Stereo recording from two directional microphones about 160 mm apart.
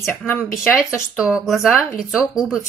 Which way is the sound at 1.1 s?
5° right (ahead or behind).